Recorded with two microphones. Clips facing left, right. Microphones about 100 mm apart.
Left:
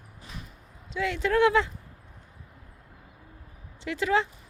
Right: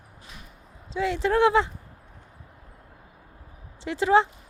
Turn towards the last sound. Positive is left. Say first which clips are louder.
# right 5 dB
turn(degrees=-30)  # may be behind; listen again after turning